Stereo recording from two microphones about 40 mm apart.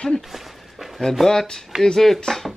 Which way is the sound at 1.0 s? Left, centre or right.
Centre.